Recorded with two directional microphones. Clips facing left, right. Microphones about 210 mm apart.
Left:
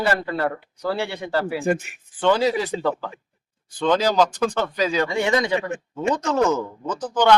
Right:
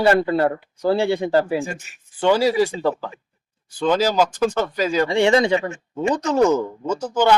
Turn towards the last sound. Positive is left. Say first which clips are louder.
# right 1 dB
turn(degrees=-10)  # may be behind; listen again after turning